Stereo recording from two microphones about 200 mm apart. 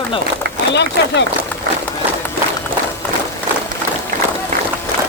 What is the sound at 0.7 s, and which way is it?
Speech, 60° left (ahead or behind).